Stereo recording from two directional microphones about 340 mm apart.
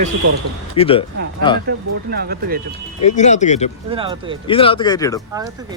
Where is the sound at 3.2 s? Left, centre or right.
Left.